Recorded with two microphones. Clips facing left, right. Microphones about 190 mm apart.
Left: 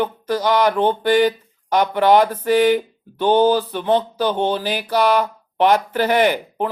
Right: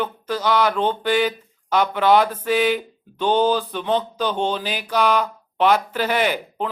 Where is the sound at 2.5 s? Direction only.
45° left (ahead or behind).